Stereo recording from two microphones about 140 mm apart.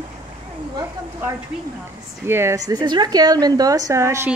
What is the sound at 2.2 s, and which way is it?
Speech, 15° right (ahead or behind).